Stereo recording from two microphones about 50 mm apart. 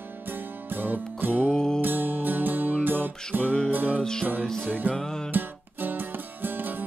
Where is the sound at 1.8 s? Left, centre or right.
Right.